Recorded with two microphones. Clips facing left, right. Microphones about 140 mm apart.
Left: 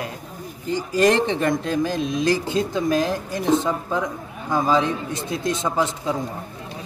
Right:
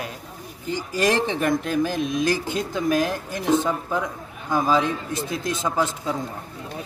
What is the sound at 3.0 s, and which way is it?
Speech, 20° left (ahead or behind).